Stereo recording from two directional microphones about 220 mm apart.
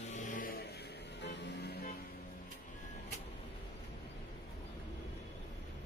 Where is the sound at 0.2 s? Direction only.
40° left (ahead or behind).